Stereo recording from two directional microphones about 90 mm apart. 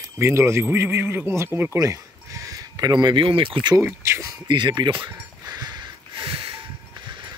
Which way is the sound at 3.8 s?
30° right (ahead or behind).